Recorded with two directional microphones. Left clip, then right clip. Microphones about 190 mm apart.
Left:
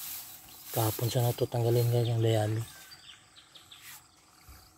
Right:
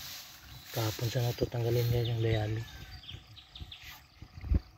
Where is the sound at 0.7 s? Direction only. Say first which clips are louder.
Left 4 dB; 20° left (ahead or behind).